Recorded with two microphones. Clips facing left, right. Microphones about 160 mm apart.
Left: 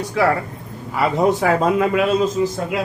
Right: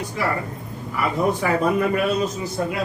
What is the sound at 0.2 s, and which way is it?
A man's voice, 90° left.